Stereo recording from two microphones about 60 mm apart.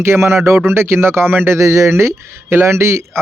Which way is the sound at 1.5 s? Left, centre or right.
Right.